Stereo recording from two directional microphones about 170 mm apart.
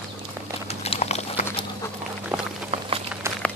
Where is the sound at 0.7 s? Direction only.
40° left (ahead or behind).